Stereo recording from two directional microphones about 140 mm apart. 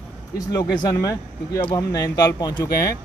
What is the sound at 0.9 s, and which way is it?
Speech, 25° left (ahead or behind).